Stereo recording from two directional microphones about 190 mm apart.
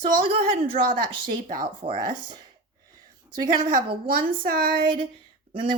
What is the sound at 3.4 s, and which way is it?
Speech, 25° right (ahead or behind).